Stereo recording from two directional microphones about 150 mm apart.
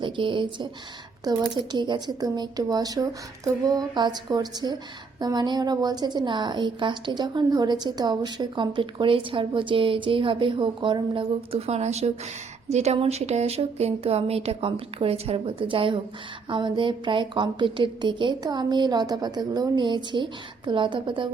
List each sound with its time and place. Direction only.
0.0 s a woman's voice: 35° right (ahead or behind)